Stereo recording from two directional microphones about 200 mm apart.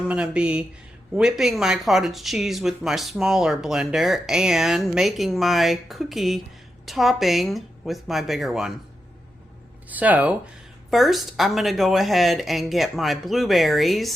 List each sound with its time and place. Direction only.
0.1 s speech: 5° right (ahead or behind)
9.9 s speech: 10° right (ahead or behind)